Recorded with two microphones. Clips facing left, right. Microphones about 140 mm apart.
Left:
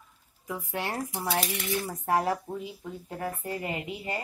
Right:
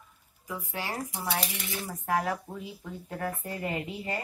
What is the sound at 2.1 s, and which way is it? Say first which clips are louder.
Speech: left 2 dB; 30° left (ahead or behind).